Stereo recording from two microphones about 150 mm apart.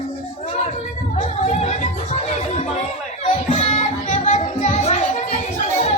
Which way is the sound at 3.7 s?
55° left (ahead or behind).